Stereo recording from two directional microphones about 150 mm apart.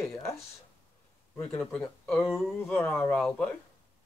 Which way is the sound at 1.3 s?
15° left (ahead or behind).